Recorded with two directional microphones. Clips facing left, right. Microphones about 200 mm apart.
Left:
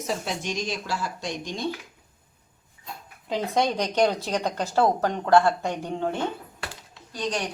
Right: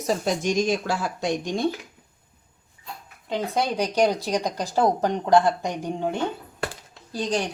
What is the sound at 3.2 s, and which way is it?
Speech, centre (ahead or behind).